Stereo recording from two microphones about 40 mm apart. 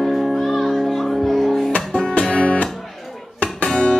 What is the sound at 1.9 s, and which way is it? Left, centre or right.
Music, centre.